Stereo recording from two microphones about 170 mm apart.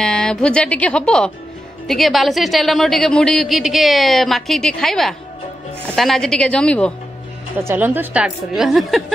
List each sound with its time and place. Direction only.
0.0 s a woman's voice: 5° left (ahead or behind)
7.6 s a woman's voice: 10° right (ahead or behind)